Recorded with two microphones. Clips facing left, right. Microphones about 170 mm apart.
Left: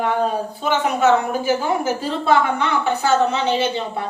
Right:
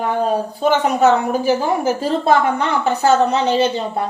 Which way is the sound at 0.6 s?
40° right (ahead or behind).